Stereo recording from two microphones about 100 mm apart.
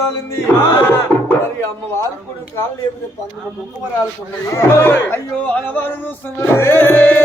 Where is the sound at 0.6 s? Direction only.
25° left (ahead or behind).